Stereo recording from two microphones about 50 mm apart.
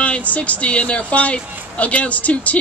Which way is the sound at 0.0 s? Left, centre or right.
Left.